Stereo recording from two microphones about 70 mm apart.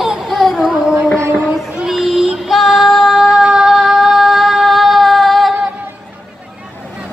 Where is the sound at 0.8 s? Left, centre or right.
Centre.